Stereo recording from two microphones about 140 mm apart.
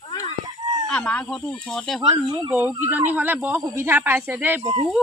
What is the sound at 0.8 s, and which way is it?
Speech, 5° left (ahead or behind).